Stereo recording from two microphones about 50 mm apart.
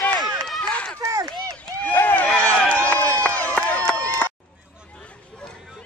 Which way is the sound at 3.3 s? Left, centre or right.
Left.